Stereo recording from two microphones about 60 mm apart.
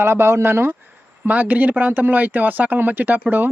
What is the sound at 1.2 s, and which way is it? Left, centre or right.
Speech, right.